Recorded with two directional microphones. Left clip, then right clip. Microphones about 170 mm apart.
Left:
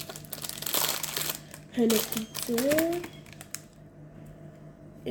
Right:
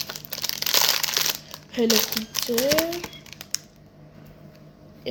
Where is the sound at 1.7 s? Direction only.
5° left (ahead or behind).